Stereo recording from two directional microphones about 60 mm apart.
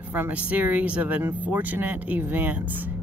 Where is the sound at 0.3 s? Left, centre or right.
Right.